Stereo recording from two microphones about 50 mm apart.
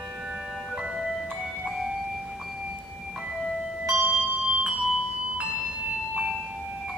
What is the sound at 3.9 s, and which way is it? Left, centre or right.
Music, centre.